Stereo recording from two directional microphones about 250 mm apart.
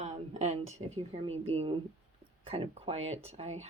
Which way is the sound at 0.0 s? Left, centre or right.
Right.